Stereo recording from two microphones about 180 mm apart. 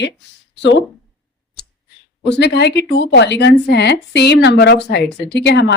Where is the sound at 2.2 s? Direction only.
70° left (ahead or behind).